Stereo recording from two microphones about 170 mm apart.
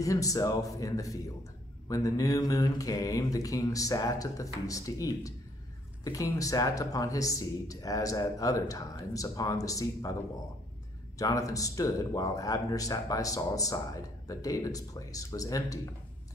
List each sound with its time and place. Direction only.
0.0 s speech: 20° left (ahead or behind)
11.1 s speech: 20° left (ahead or behind)